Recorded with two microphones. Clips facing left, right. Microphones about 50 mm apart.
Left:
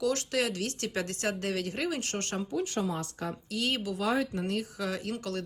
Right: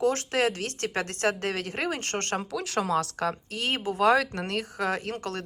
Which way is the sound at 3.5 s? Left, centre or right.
Right.